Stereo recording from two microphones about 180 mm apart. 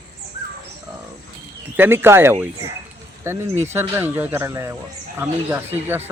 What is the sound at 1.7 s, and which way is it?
Speech, 10° right (ahead or behind).